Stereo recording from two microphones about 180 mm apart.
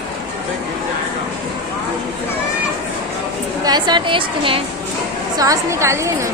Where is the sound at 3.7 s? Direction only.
25° right (ahead or behind).